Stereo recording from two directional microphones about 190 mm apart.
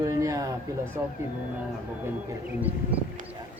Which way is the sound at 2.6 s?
10° right (ahead or behind).